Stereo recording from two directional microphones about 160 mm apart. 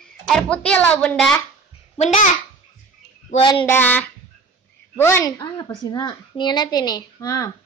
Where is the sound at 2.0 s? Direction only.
50° left (ahead or behind).